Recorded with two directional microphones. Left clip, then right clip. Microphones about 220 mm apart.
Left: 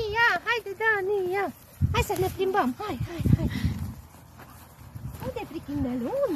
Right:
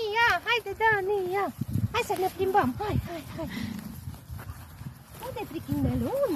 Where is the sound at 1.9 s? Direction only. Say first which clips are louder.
Left 1 dB; 25° left (ahead or behind).